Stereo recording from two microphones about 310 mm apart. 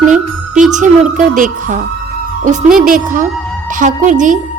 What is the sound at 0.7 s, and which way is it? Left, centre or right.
A woman's voice, right.